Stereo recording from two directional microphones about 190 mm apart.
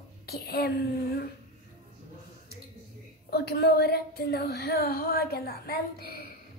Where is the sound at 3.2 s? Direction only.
55° left (ahead or behind).